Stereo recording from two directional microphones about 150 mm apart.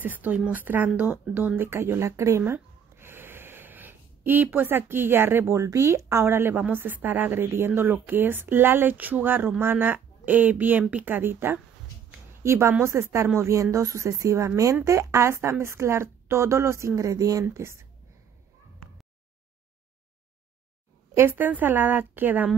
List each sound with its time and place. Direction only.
0.0 s a woman's voice: 10° right (ahead or behind)
21.1 s a woman's voice: 15° right (ahead or behind)